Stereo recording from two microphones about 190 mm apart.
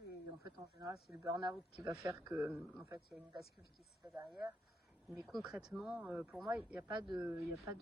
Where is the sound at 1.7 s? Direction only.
5° right (ahead or behind).